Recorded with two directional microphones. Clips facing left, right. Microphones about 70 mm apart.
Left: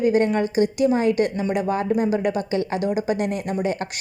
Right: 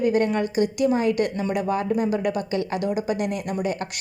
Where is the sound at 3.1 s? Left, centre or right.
Left.